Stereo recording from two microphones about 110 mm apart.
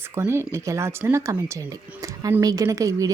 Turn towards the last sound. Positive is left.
turn(degrees=-30)  # may be behind; listen again after turning